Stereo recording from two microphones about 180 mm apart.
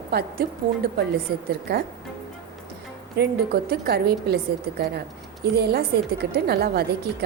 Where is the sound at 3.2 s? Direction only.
60° right (ahead or behind).